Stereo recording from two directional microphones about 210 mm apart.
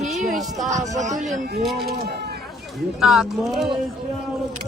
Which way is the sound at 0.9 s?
35° right (ahead or behind).